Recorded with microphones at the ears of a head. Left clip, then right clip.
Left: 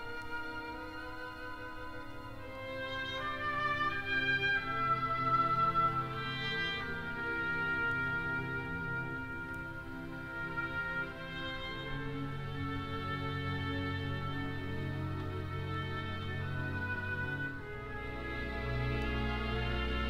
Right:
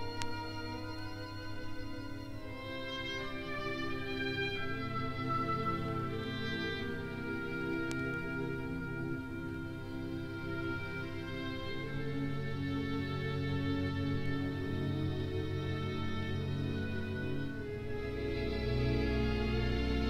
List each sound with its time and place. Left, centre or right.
3.4 s music: left